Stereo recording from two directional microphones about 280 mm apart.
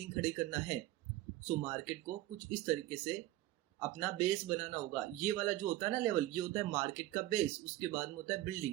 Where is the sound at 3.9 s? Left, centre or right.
Centre.